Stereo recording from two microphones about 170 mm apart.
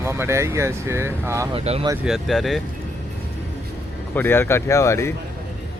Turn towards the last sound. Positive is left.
turn(degrees=15)  # may be behind; listen again after turning